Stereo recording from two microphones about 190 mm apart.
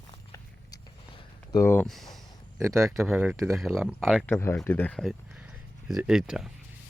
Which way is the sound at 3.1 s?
10° right (ahead or behind).